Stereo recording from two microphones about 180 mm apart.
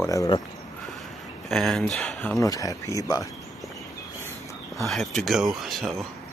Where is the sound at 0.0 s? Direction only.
20° left (ahead or behind).